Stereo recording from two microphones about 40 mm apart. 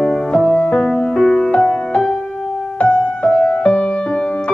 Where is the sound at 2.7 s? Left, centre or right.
Left.